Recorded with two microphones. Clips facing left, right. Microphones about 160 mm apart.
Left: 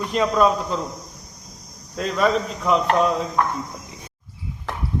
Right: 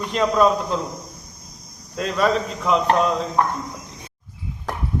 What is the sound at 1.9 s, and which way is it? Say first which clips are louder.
Speech: even; centre (ahead or behind).